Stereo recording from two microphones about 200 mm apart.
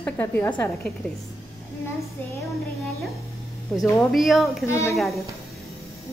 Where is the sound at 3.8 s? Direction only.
Centre (ahead or behind).